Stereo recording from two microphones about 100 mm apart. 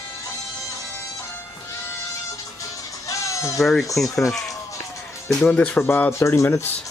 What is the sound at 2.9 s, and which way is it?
Music, 35° left (ahead or behind).